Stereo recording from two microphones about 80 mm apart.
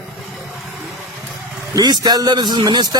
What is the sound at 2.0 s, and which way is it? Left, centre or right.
Speech, right.